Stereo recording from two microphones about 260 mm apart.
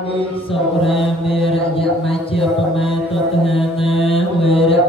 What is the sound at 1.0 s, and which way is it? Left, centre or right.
Mantra, left.